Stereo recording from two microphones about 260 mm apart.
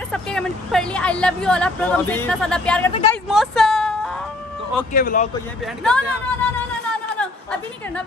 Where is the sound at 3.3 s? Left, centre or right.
Centre.